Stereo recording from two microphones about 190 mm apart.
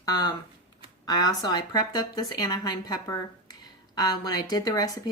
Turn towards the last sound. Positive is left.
turn(degrees=20)  # may be behind; listen again after turning